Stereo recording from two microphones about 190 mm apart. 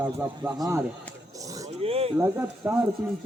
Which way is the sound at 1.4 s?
20° right (ahead or behind).